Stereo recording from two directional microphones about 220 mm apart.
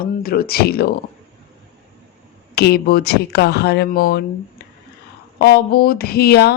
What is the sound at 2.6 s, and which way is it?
Speech, 45° left (ahead or behind).